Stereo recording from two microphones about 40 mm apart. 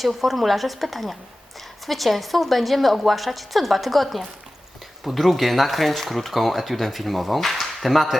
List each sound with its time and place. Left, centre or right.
0.0 s a woman's voice: centre